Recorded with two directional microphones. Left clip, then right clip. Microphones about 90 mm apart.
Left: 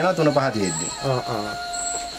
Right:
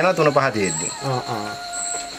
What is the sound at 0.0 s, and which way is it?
Speech, 20° right (ahead or behind).